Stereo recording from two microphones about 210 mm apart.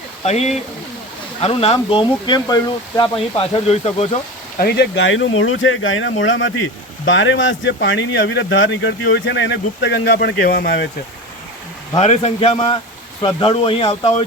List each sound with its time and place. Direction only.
0.3 s speech: 30° left (ahead or behind)
4.5 s speech: 50° left (ahead or behind)
11.9 s speech: 30° left (ahead or behind)